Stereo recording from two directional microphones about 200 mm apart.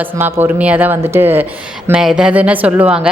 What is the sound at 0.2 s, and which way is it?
A woman's voice, 10° right (ahead or behind).